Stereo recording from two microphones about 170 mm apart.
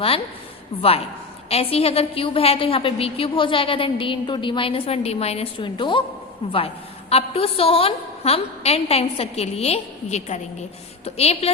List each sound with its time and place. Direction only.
0.8 s a woman's voice: 35° left (ahead or behind)